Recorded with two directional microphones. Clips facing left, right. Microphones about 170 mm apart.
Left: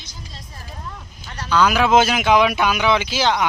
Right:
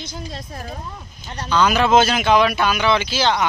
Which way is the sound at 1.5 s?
5° left (ahead or behind).